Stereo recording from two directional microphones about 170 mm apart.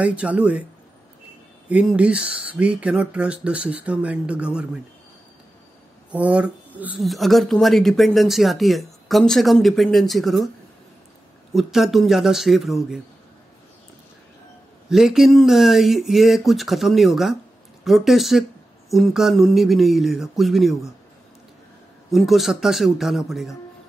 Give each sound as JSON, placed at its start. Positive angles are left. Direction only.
{"t": 0.0, "sound": "speech", "side_deg": -10}
{"t": 1.7, "sound": "speech", "side_deg": -5}
{"t": 6.1, "sound": "speech", "side_deg": -10}
{"t": 11.5, "sound": "speech", "side_deg": 0}
{"t": 14.9, "sound": "speech", "side_deg": -5}
{"t": 22.1, "sound": "speech", "side_deg": 0}